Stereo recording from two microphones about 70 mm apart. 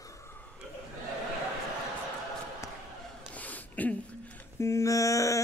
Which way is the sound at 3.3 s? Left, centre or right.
Left.